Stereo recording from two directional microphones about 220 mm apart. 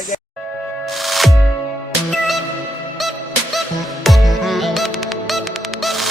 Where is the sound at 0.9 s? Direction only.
Centre (ahead or behind).